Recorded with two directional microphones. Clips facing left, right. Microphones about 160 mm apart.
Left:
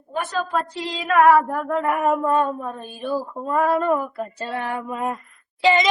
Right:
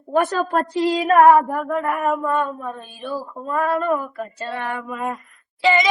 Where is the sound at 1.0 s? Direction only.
30° right (ahead or behind).